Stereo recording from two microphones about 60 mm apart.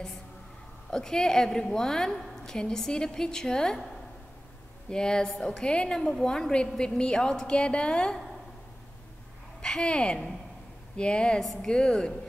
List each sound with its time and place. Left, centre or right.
0.8 s a woman's voice: centre
9.6 s a woman's voice: centre